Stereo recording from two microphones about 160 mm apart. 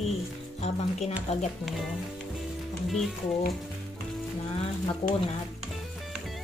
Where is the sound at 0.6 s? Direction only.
40° left (ahead or behind).